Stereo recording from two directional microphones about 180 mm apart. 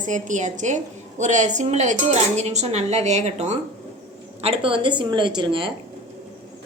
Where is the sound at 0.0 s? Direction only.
45° right (ahead or behind); by 5.7 s 30° right (ahead or behind).